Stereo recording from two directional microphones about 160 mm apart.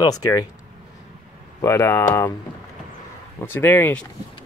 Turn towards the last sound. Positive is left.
turn(degrees=15)  # may be behind; listen again after turning